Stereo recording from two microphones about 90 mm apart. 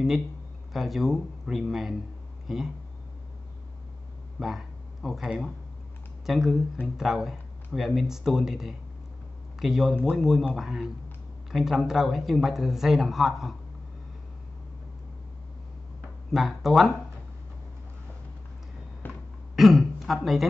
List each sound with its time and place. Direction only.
0.7 s speech: centre (ahead or behind)
4.4 s speech: 5° right (ahead or behind)
16.3 s speech: 5° right (ahead or behind)
19.0 s a sound: 20° left (ahead or behind)
19.5 s speech: centre (ahead or behind)